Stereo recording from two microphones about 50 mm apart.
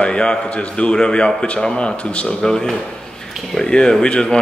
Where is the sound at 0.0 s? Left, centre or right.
Centre.